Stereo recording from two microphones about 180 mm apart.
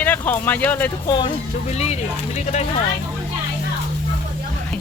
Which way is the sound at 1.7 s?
35° left (ahead or behind).